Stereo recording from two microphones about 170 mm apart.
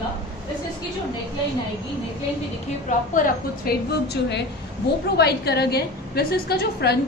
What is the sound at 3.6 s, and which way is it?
A woman's voice, 70° left (ahead or behind).